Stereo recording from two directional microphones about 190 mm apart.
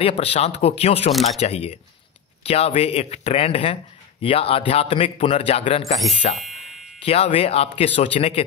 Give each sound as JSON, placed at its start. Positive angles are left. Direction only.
{"t": 0.0, "sound": "a man's voice", "side_deg": 30}
{"t": 6.3, "sound": "a sound", "side_deg": 0}
{"t": 7.1, "sound": "speech", "side_deg": 30}